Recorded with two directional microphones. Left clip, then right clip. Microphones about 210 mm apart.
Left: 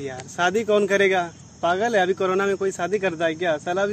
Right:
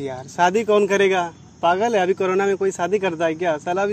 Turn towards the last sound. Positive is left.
turn(degrees=-15)  # may be behind; listen again after turning